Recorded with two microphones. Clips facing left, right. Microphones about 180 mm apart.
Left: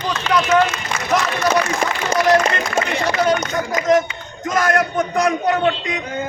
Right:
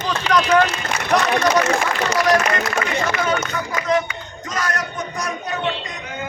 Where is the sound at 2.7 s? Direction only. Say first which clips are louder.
Left 3 dB; 35° left (ahead or behind).